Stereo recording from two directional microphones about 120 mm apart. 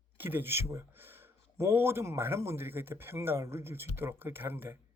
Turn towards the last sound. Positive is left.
turn(degrees=-20)  # may be behind; listen again after turning